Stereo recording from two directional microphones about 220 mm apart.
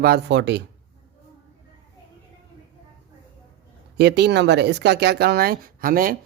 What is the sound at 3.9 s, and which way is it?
Speech, 50° right (ahead or behind).